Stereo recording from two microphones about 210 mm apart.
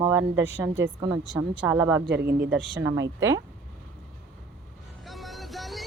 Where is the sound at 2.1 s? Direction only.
50° right (ahead or behind).